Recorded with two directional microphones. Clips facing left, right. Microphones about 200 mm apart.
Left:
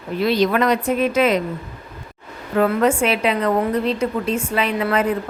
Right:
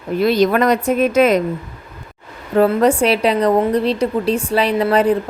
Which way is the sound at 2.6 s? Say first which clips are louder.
Right 4 dB; 35° right (ahead or behind).